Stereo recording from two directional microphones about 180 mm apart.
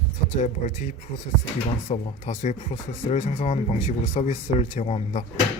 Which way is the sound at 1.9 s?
35° left (ahead or behind).